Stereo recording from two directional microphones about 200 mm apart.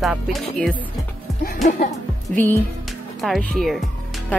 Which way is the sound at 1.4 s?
45° left (ahead or behind).